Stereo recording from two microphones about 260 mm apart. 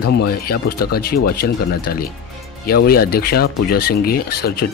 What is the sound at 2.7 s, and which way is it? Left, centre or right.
Speech, left.